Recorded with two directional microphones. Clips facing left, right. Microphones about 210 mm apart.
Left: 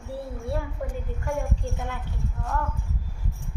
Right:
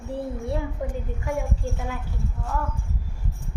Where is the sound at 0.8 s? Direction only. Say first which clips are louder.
Right 2 dB; 15° right (ahead or behind).